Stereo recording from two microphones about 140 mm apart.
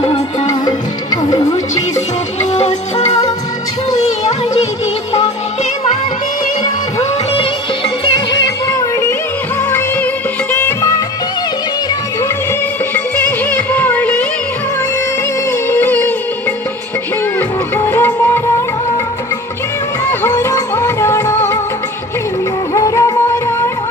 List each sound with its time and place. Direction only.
0.1 s music: 30° left (ahead or behind)
2.5 s music: 55° left (ahead or behind)
10.5 s music: 15° left (ahead or behind)
13.5 s music: 15° left (ahead or behind)
15.7 s music: 15° left (ahead or behind)
17.7 s music: 15° left (ahead or behind)
20.1 s music: 20° left (ahead or behind)
22.8 s music: 25° left (ahead or behind)